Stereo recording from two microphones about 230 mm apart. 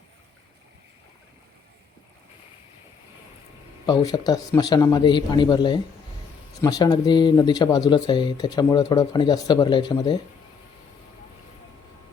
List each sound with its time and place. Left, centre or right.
3.8 s speech: centre